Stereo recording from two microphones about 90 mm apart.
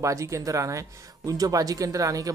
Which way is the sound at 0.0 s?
35° right (ahead or behind).